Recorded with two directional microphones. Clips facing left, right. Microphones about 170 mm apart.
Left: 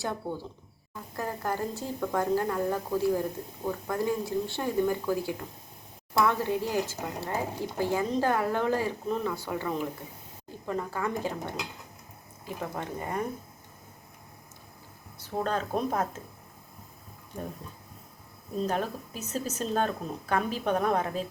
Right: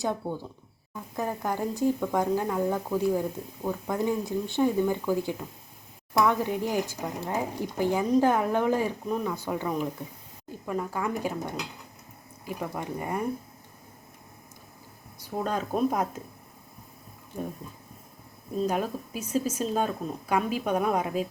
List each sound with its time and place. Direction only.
0.0 s speech: 15° right (ahead or behind)
15.2 s speech: 10° right (ahead or behind)
18.6 s speech: 10° right (ahead or behind)